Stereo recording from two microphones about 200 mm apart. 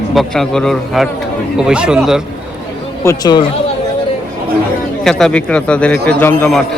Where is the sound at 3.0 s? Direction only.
15° left (ahead or behind).